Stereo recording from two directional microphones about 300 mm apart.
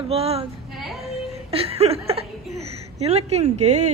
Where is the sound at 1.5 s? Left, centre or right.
Centre.